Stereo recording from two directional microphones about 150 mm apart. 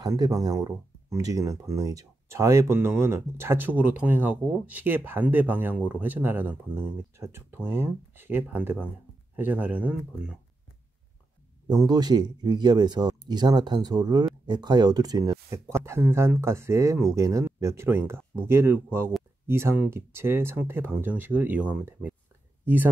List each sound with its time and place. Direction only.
0.0 s speech: 25° right (ahead or behind); by 10.3 s 10° right (ahead or behind)
11.6 s speech: 25° right (ahead or behind)